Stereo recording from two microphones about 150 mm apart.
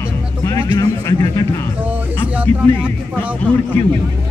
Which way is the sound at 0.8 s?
25° left (ahead or behind).